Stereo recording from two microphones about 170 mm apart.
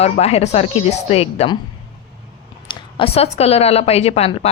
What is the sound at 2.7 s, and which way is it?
Speech, 30° left (ahead or behind).